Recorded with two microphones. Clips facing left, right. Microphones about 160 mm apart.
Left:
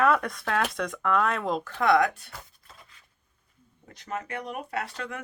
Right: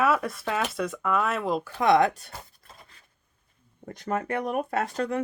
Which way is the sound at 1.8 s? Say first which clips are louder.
Right 2 dB; 25° right (ahead or behind).